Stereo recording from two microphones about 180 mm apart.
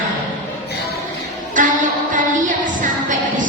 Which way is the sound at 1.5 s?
45° right (ahead or behind).